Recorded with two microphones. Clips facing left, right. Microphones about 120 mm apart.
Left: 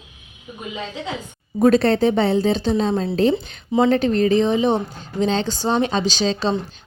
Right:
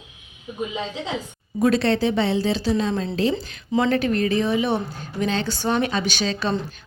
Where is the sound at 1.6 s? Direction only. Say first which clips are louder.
Left 4 dB; 35° left (ahead or behind).